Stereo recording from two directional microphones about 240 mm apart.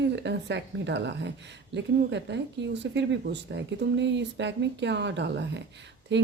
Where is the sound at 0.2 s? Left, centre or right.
Right.